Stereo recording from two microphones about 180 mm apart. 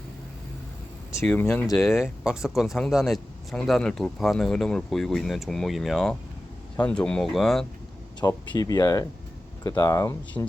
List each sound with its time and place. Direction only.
1.2 s speech: 10° left (ahead or behind)
1.8 s speech: centre (ahead or behind)
8.2 s speech: 20° left (ahead or behind)